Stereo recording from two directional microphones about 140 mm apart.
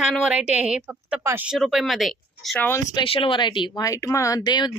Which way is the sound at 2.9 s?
35° left (ahead or behind).